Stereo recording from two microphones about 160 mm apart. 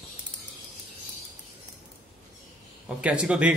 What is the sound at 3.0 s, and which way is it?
Speech, 5° right (ahead or behind).